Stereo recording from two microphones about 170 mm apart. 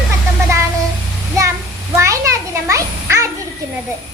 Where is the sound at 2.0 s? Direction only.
20° right (ahead or behind).